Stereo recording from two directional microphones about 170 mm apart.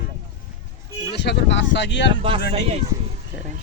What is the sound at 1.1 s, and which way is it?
Speech, 90° left.